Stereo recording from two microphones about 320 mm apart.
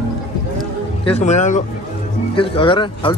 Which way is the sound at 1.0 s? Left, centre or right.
Centre.